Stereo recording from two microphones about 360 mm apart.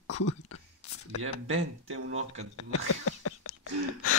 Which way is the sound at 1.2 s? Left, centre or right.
Right.